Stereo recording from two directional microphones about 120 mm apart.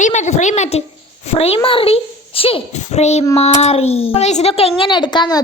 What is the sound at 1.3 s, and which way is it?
A child's voice, 55° left (ahead or behind).